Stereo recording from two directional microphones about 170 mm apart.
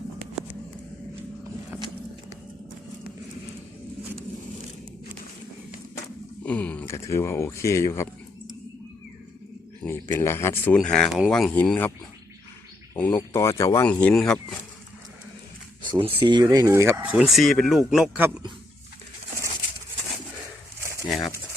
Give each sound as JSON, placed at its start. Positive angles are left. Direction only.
{"t": 6.4, "sound": "speech", "side_deg": 10}
{"t": 9.8, "sound": "speech", "side_deg": 15}
{"t": 12.9, "sound": "speech", "side_deg": 10}
{"t": 13.9, "sound": "speech", "side_deg": 5}
{"t": 15.8, "sound": "speech", "side_deg": -30}